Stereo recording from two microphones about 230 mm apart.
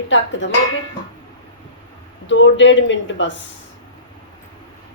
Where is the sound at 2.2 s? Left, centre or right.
Left.